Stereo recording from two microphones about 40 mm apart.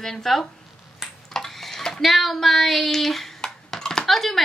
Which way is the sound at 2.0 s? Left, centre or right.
Centre.